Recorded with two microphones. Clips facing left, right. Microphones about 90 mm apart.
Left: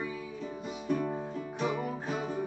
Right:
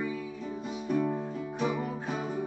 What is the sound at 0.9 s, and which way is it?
Music, 5° left (ahead or behind).